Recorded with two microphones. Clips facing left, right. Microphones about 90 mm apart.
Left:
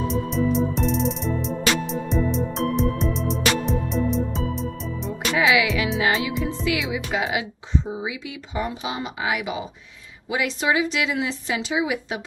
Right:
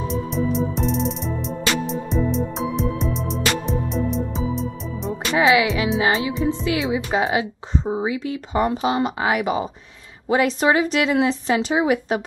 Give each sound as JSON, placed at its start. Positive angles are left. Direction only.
{"t": 0.0, "sound": "music", "side_deg": 0}
{"t": 5.4, "sound": "speech", "side_deg": -35}